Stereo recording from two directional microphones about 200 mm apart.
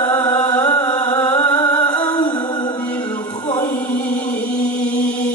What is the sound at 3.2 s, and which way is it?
Chant, 20° left (ahead or behind).